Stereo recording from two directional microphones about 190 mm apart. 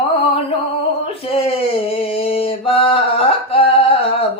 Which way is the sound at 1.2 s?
30° left (ahead or behind).